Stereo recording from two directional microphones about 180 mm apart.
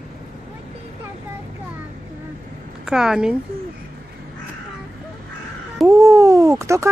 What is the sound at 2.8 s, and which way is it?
Speech, 5° right (ahead or behind).